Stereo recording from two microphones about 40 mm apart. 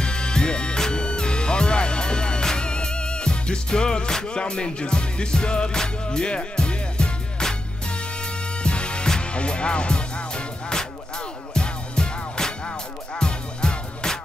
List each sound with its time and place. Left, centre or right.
0.0 s music: left
8.6 s music: left